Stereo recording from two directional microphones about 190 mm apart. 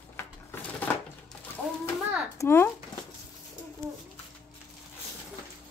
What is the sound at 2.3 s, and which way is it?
Speech, 15° left (ahead or behind).